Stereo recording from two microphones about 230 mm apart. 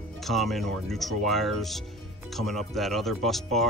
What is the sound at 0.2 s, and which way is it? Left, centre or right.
Speech, centre.